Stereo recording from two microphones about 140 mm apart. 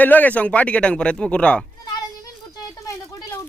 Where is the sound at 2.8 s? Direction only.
25° left (ahead or behind).